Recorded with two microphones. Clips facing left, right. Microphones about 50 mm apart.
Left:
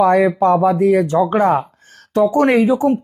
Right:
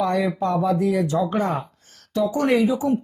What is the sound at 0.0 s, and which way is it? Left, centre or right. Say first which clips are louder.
Speech: left 9 dB; left.